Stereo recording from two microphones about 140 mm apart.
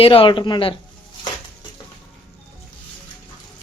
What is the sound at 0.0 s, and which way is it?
Speech, 40° left (ahead or behind).